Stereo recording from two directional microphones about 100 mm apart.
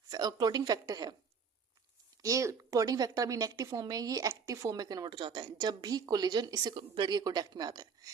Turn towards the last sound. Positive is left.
turn(degrees=-40)  # may be behind; listen again after turning